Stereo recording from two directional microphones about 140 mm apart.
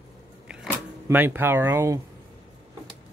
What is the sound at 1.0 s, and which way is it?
Speech, 15° right (ahead or behind).